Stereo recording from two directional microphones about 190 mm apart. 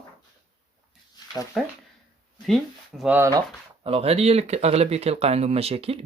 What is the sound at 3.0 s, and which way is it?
Speech, 10° right (ahead or behind).